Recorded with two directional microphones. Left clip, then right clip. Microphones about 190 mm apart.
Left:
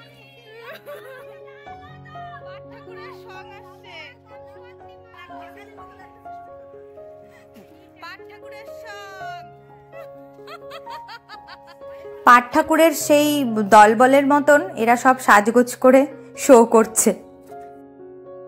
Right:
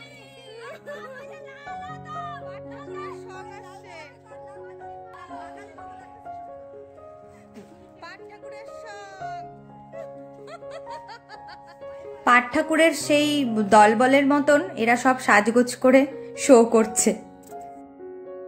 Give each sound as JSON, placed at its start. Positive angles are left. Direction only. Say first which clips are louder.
{"t": 2.9, "sound": "music", "louder": "right 2 dB", "side_deg": 0}
{"t": 8.0, "sound": "music", "louder": "left 3 dB", "side_deg": -10}
{"t": 10.5, "sound": "music", "louder": "left 2 dB", "side_deg": -20}
{"t": 12.3, "sound": "a woman's voice", "louder": "left 6 dB", "side_deg": 20}